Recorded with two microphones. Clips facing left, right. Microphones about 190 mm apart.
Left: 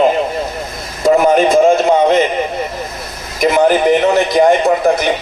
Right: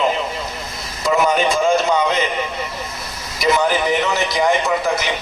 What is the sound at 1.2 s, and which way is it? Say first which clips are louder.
A man's voice: left 6 dB; 50° left (ahead or behind).